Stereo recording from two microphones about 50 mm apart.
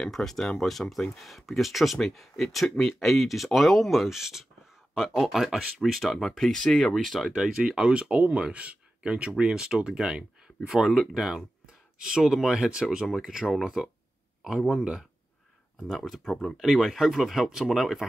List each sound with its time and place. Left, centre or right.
0.0 s speech: centre
7.3 s speech: centre
10.9 s speech: centre
16.3 s speech: centre